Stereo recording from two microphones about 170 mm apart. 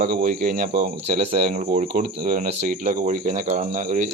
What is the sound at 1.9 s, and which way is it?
Speech, 55° right (ahead or behind).